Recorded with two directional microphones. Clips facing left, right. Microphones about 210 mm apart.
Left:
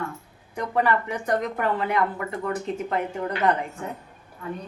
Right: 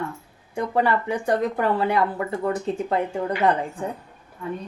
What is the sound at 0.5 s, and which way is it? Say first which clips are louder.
Speech: right 2 dB; 30° right (ahead or behind).